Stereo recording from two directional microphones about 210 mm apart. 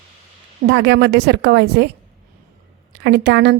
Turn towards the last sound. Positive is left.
turn(degrees=-55)  # may be behind; listen again after turning